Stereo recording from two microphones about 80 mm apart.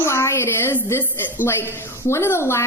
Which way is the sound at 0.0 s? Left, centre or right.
Left.